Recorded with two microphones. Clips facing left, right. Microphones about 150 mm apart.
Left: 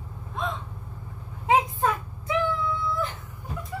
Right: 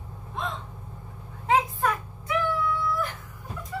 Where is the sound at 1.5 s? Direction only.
25° left (ahead or behind).